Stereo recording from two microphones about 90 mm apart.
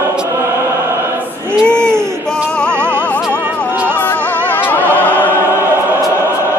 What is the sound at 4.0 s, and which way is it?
Music, 20° left (ahead or behind).